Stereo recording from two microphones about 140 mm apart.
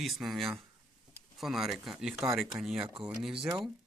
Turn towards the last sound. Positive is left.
turn(degrees=-5)  # may be behind; listen again after turning